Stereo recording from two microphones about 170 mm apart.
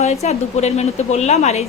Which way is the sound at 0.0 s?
40° left (ahead or behind).